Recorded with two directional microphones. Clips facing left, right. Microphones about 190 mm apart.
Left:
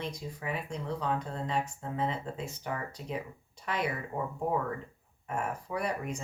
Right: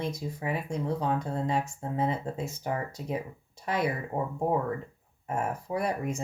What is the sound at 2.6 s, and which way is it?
Speech, 30° right (ahead or behind).